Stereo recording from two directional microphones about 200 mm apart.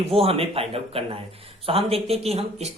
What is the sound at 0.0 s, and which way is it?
Speech, 30° right (ahead or behind).